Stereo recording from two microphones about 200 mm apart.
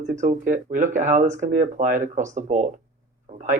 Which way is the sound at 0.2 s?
40° right (ahead or behind).